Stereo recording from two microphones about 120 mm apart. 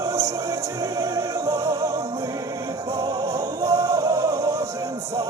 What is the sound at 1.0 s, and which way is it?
Music, 30° right (ahead or behind).